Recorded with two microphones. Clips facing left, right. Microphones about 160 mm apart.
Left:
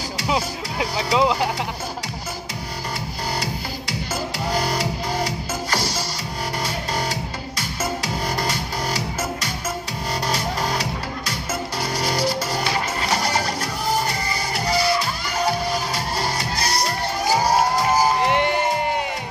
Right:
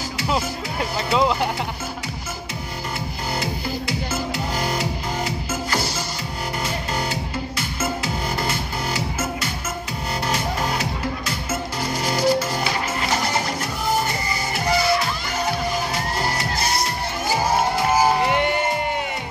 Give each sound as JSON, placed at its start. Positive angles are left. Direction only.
{"t": 0.3, "sound": "speech", "side_deg": 0}
{"t": 4.6, "sound": "music", "side_deg": 35}
{"t": 10.2, "sound": "music", "side_deg": 35}
{"t": 12.0, "sound": "music", "side_deg": 35}
{"t": 15.9, "sound": "music", "side_deg": 35}
{"t": 18.2, "sound": "a sound", "side_deg": 0}